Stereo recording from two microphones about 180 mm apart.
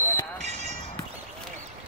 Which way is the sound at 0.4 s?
40° right (ahead or behind).